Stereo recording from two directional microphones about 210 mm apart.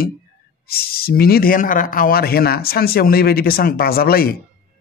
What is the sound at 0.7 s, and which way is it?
A man's voice, 45° left (ahead or behind).